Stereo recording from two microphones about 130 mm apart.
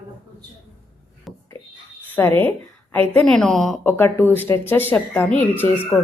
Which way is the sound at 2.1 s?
15° left (ahead or behind).